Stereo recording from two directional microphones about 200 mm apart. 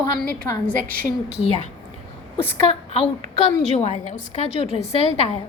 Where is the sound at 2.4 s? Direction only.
30° left (ahead or behind).